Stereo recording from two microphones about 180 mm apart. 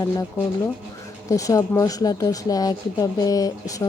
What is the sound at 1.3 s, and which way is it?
Speech, 20° left (ahead or behind).